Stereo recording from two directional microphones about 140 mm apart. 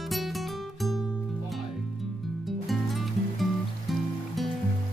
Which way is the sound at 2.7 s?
Centre (ahead or behind).